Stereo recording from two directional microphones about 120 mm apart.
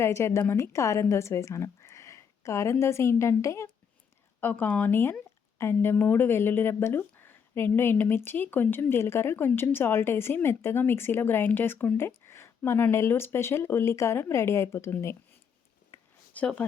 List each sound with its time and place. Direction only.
0.0 s a woman's voice: 20° left (ahead or behind)
15.9 s a sound: 20° left (ahead or behind)
16.3 s speech: 10° left (ahead or behind)